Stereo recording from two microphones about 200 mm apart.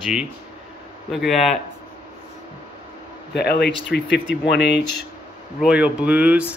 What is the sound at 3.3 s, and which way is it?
Speech, 55° left (ahead or behind).